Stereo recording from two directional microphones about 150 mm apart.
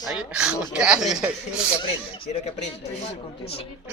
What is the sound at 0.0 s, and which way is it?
Speech, 5° right (ahead or behind).